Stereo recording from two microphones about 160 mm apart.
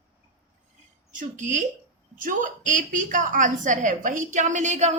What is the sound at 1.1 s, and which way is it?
Speech, 50° right (ahead or behind).